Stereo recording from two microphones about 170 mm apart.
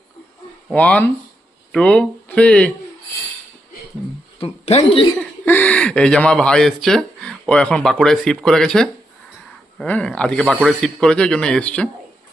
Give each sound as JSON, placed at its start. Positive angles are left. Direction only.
{"t": 0.7, "sound": "speech", "side_deg": 5}
{"t": 4.4, "sound": "speech", "side_deg": 35}
{"t": 5.5, "sound": "speech", "side_deg": 10}